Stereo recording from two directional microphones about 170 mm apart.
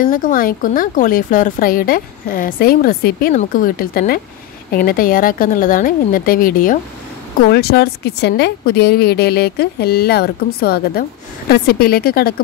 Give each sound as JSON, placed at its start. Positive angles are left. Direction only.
{"t": 0.0, "sound": "speech", "side_deg": 55}
{"t": 7.5, "sound": "a woman's voice", "side_deg": 70}